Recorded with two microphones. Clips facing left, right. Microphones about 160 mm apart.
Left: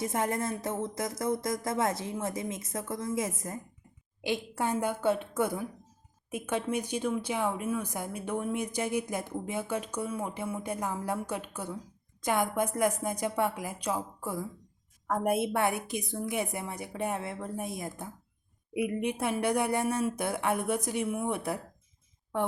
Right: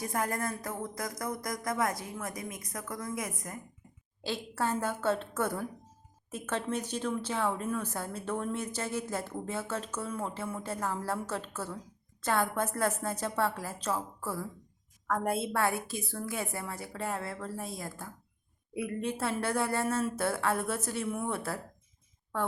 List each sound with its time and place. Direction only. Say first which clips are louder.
0.0 s a woman's voice: left 2 dB; 25° left (ahead or behind)
4.2 s a woman's voice: left 2 dB; 15° left (ahead or behind)